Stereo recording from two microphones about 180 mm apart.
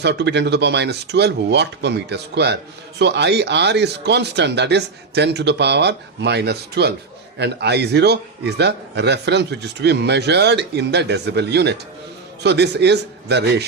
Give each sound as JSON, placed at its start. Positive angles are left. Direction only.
{"t": 0.0, "sound": "a man's voice", "side_deg": -70}